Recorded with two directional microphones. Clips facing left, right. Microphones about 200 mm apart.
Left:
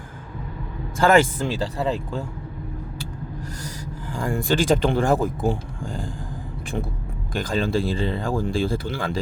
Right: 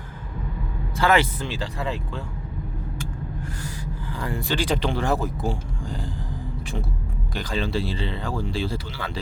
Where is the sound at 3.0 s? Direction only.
40° left (ahead or behind).